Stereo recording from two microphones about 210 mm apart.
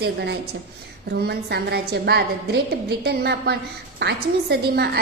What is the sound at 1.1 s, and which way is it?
A woman's voice, 50° right (ahead or behind).